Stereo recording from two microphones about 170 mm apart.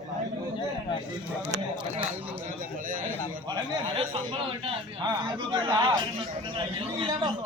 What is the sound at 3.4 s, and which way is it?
A man's voice, 30° right (ahead or behind).